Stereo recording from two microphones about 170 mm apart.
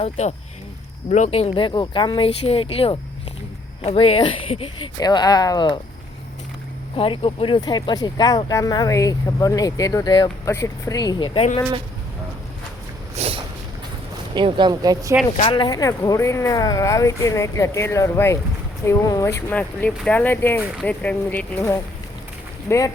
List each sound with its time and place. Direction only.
0.0 s speech: 40° left (ahead or behind)
6.9 s speech: 30° left (ahead or behind)
13.1 s a sound: 35° right (ahead or behind)
14.3 s speech: 30° right (ahead or behind)
15.4 s speech: 30° left (ahead or behind); by 21.8 s 10° left (ahead or behind)